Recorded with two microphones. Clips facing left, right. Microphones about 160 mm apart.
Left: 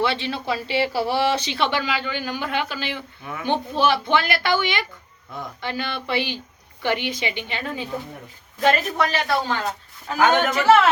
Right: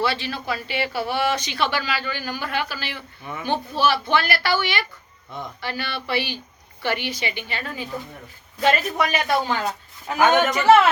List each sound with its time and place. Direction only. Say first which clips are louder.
0.0 s speech: left 1 dB; 25° left (ahead or behind)
8.6 s a man's voice: left 1 dB; 10° right (ahead or behind)